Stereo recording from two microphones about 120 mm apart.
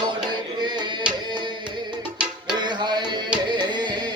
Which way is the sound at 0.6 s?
40° right (ahead or behind).